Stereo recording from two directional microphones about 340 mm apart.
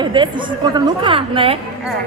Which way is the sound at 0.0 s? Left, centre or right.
Centre.